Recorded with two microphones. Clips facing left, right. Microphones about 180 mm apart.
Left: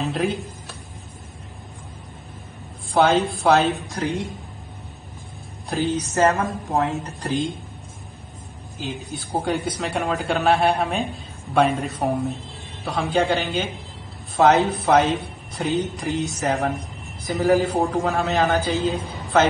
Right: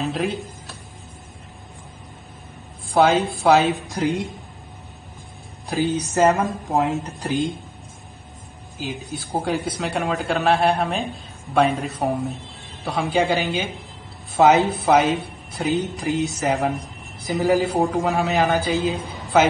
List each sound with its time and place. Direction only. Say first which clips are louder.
0.0 s speech: even; centre (ahead or behind)
2.9 s speech: right 1 dB; 5° right (ahead or behind)
5.7 s speech: right 1 dB; centre (ahead or behind)
6.1 s a man's voice: right 2 dB; 15° right (ahead or behind)
7.1 s speech: right 1 dB; centre (ahead or behind)
8.7 s a man's voice: right 1 dB; centre (ahead or behind)